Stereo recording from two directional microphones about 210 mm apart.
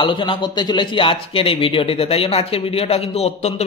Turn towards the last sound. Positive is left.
turn(degrees=30)  # may be behind; listen again after turning